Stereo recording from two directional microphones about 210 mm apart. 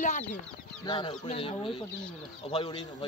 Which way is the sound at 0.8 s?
25° left (ahead or behind).